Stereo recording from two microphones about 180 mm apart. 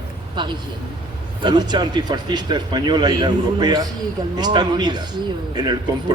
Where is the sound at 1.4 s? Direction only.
25° right (ahead or behind).